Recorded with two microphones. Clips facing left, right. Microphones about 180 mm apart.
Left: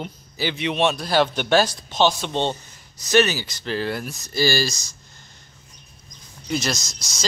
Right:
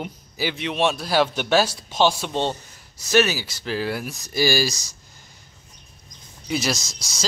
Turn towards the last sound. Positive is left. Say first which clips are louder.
# right 1 dB
turn(degrees=-5)  # may be behind; listen again after turning